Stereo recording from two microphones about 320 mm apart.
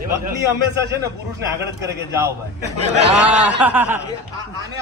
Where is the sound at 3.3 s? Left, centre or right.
Centre.